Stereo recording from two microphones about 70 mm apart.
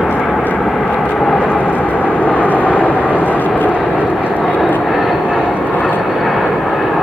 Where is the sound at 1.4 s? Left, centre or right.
Centre.